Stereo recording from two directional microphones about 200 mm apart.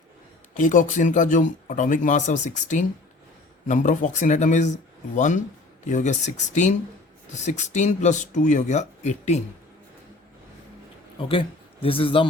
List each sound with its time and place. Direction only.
0.5 s speech: 40° left (ahead or behind)
11.2 s speech: 25° left (ahead or behind)